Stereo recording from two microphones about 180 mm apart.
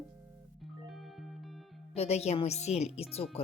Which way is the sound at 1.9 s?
35° left (ahead or behind).